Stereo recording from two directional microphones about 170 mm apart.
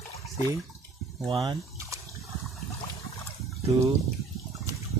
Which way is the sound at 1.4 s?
20° right (ahead or behind).